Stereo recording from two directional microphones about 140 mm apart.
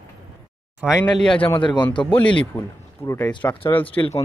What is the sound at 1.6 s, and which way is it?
Speech, 35° left (ahead or behind).